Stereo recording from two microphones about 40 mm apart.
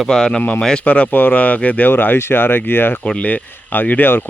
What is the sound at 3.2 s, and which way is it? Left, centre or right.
Speech, left.